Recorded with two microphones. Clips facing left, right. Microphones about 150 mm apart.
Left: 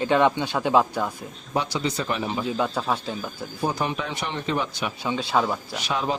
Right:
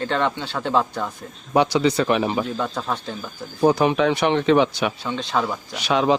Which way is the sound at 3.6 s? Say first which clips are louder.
Right 10 dB; 80° right.